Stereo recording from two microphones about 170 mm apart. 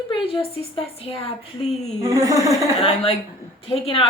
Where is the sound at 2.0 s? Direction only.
20° right (ahead or behind).